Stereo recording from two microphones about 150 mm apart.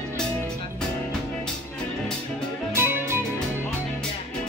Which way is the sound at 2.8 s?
15° right (ahead or behind).